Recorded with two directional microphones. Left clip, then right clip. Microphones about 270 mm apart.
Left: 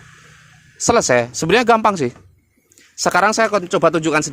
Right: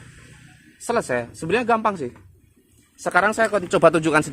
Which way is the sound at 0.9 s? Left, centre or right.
Left.